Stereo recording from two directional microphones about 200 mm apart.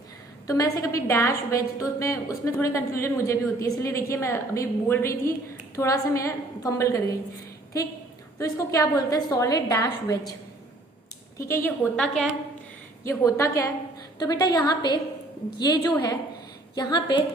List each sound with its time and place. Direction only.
0.4 s a woman's voice: 15° left (ahead or behind)
8.4 s a woman's voice: 15° left (ahead or behind)
11.3 s a woman's voice: 15° left (ahead or behind)
11.9 s a woman's voice: centre (ahead or behind)
13.1 s a woman's voice: 15° left (ahead or behind)